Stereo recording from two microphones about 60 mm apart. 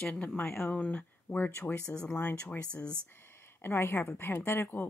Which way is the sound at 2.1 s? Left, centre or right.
Left.